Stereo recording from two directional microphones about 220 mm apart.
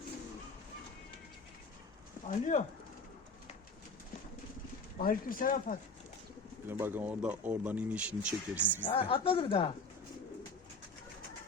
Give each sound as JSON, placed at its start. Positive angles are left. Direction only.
{"t": 2.2, "sound": "speech", "side_deg": 35}
{"t": 4.9, "sound": "speech", "side_deg": 40}
{"t": 6.7, "sound": "speech", "side_deg": -10}
{"t": 8.9, "sound": "speech", "side_deg": 25}